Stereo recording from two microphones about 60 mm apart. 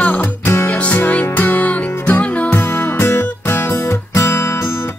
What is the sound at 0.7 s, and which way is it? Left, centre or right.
Music, left.